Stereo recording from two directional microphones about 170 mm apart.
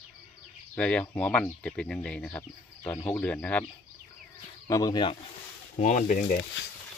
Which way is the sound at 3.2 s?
5° left (ahead or behind).